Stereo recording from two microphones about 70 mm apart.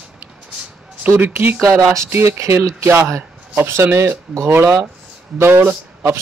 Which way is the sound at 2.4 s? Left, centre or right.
Right.